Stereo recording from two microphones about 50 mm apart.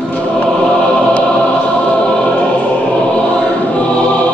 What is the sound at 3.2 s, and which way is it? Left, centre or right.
Choir, left.